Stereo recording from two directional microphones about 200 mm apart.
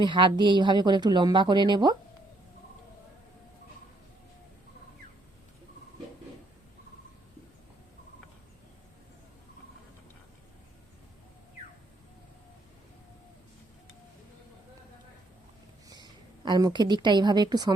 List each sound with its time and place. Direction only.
0.0 s speech: 25° right (ahead or behind)
15.9 s a woman's voice: 20° right (ahead or behind)